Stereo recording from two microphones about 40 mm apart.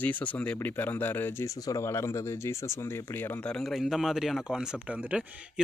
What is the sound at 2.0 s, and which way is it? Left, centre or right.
Speech, left.